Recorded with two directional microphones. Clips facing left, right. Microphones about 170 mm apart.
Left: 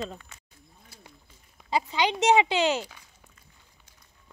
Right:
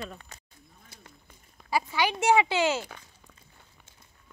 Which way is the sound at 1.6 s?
20° left (ahead or behind).